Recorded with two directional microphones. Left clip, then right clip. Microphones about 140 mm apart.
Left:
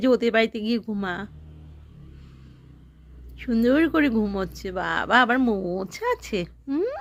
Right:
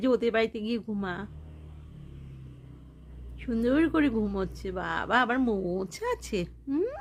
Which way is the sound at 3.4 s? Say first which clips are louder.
Left 5 dB; 25° left (ahead or behind).